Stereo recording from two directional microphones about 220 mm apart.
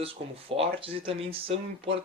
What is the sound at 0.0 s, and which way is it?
Speech, 25° right (ahead or behind).